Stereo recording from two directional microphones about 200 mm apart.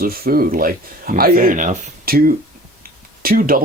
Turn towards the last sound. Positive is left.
turn(degrees=-45)  # may be behind; listen again after turning